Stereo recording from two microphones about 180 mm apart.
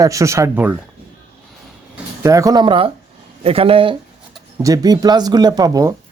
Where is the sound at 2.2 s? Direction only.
20° right (ahead or behind).